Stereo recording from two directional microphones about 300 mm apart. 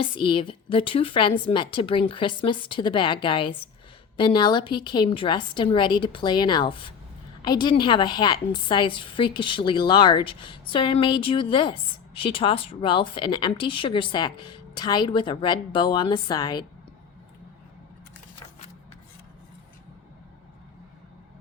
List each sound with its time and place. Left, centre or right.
0.0 s a woman's voice: centre